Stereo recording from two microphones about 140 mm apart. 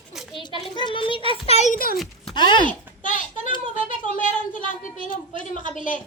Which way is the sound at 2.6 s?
70° left (ahead or behind).